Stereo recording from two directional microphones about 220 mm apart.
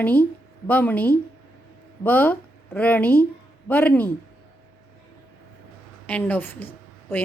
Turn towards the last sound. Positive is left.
turn(degrees=10)  # may be behind; listen again after turning